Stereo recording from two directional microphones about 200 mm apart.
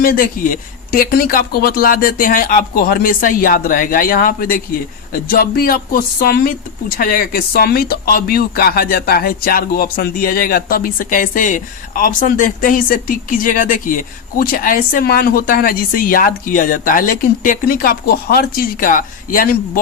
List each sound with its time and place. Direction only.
0.0 s speech: 45° left (ahead or behind)